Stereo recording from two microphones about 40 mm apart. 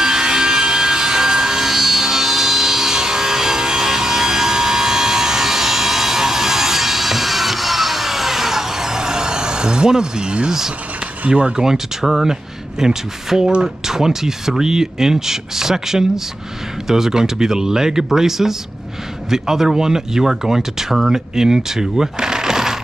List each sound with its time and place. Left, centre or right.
0.0 s a sound: centre
11.2 s speech: right
11.5 s speech: centre